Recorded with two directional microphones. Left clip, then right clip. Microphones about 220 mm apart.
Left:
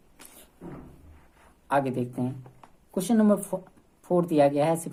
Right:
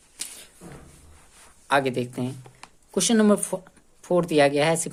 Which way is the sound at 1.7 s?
30° right (ahead or behind).